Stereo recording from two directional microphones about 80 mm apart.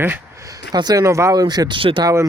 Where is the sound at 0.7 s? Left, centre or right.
Right.